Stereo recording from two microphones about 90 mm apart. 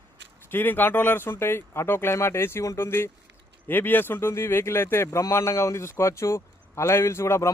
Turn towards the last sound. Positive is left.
turn(degrees=30)  # may be behind; listen again after turning